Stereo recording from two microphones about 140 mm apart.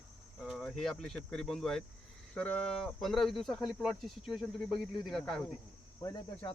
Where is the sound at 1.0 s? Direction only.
5° left (ahead or behind).